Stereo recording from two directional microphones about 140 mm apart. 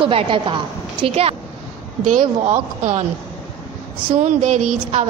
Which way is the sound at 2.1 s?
65° right (ahead or behind).